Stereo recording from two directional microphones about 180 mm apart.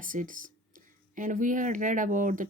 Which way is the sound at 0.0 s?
50° right (ahead or behind).